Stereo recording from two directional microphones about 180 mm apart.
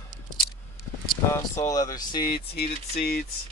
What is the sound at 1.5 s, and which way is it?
Speech, 20° left (ahead or behind).